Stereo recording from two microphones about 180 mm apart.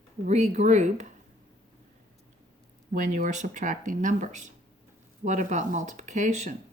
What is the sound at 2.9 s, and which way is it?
Speech, 45° right (ahead or behind).